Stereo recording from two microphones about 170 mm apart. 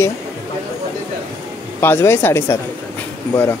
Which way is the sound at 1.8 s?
15° left (ahead or behind).